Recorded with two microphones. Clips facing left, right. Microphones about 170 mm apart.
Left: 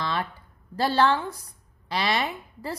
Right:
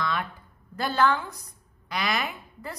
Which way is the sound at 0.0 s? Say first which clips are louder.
Left 1 dB; 30° left (ahead or behind).